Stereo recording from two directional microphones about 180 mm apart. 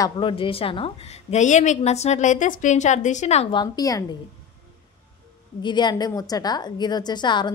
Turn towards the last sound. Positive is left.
turn(degrees=25)  # may be behind; listen again after turning